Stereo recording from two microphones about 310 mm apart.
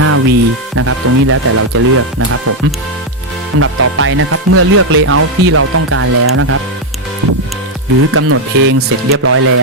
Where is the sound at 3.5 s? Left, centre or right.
Right.